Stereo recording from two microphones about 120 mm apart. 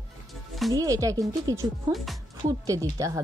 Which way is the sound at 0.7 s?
30° right (ahead or behind).